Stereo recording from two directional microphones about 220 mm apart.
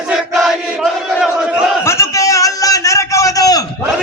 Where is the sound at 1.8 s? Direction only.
15° left (ahead or behind).